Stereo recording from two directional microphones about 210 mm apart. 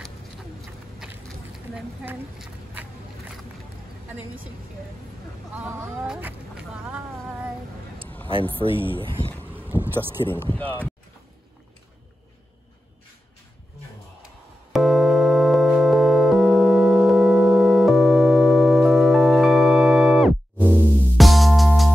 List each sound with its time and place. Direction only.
0.6 s a sound: centre (ahead or behind)
2.0 s speech: 5° right (ahead or behind)
5.7 s speech: 10° right (ahead or behind)
8.3 s speech: 25° right (ahead or behind)
9.4 s vehicle: 10° right (ahead or behind)
10.2 s speech: 10° left (ahead or behind)
14.7 s keyboard: centre (ahead or behind)